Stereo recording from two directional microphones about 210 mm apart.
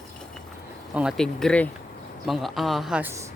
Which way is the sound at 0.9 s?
Centre (ahead or behind).